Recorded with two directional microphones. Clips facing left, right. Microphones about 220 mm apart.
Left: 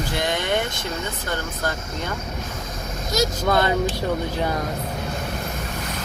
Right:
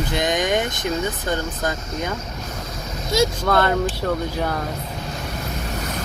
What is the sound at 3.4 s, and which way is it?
Speech, 15° left (ahead or behind).